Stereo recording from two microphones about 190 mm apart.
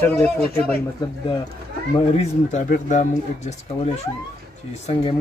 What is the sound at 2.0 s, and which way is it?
Speech, 35° left (ahead or behind).